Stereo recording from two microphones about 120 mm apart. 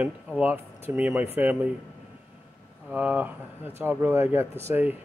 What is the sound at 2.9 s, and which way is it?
Speech, 10° right (ahead or behind).